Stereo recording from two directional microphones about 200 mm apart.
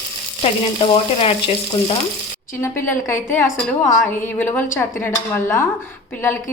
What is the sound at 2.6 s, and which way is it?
A woman's voice, 10° left (ahead or behind).